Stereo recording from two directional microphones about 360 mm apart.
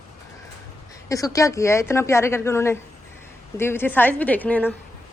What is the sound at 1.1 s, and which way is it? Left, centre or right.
A woman's voice, centre.